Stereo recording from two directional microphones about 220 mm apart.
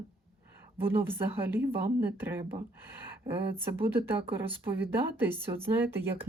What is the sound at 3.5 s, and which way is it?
Speech, 10° right (ahead or behind).